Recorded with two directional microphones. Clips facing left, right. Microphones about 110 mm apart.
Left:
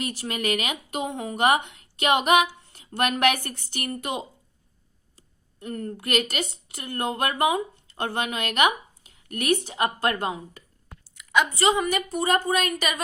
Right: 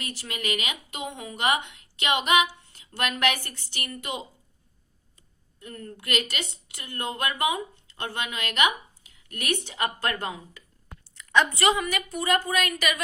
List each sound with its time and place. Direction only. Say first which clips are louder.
0.0 s a woman's voice: left 6 dB; 45° left (ahead or behind)
5.5 s a woman's voice: left 8 dB; 45° left (ahead or behind)
11.1 s a sound: even; 10° left (ahead or behind)
11.6 s a woman's voice: left 2 dB; 30° left (ahead or behind)